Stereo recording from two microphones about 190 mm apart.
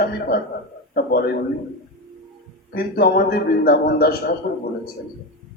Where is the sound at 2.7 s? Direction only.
55° left (ahead or behind).